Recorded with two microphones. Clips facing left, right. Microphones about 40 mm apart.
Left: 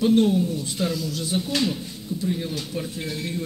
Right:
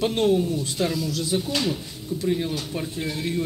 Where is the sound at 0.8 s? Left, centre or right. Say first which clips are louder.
Right 1 dB; centre.